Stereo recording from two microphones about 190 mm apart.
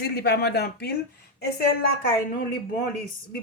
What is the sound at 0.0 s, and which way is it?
Speech, 60° left (ahead or behind).